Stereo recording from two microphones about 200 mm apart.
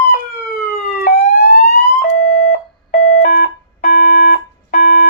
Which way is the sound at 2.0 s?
50° left (ahead or behind).